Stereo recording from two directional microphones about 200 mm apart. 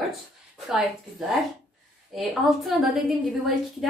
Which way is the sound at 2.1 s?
Centre (ahead or behind).